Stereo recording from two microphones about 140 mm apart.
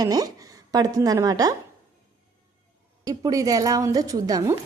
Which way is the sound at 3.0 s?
25° right (ahead or behind).